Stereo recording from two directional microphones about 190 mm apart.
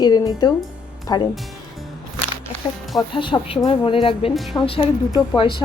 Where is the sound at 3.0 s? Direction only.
25° left (ahead or behind).